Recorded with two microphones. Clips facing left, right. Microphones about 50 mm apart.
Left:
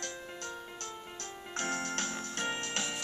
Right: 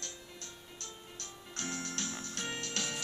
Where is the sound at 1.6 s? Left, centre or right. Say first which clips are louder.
Left 5 dB; left.